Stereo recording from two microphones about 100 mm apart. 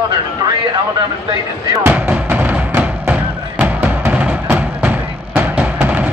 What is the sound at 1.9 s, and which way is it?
Music, 15° right (ahead or behind).